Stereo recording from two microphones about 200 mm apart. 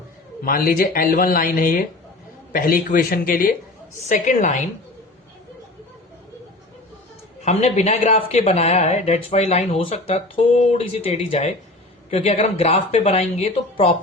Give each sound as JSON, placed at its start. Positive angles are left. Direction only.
{"t": 0.4, "sound": "speech", "side_deg": 45}
{"t": 7.4, "sound": "speech", "side_deg": 35}